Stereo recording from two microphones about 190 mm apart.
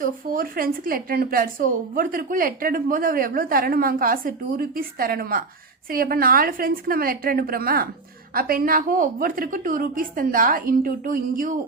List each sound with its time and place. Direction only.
0.0 s a woman's voice: 50° right (ahead or behind)